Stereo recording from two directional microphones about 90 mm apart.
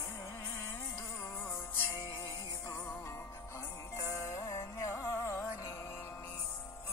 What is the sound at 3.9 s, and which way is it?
Music, 35° left (ahead or behind).